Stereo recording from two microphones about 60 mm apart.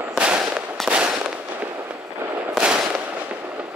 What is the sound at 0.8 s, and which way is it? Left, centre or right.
Fireworks, centre.